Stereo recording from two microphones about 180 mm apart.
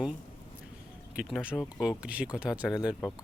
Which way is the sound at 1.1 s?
5° right (ahead or behind).